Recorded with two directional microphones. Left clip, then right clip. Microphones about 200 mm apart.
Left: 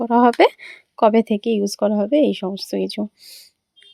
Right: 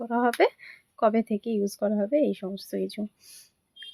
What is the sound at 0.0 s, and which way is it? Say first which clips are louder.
Speech: left 9 dB; 40° left (ahead or behind).